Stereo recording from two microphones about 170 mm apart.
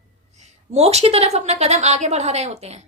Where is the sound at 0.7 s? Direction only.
40° right (ahead or behind).